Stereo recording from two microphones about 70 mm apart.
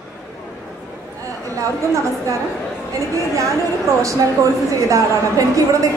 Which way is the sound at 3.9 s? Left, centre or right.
Right.